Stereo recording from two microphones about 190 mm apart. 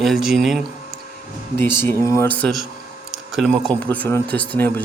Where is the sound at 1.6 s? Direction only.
10° left (ahead or behind).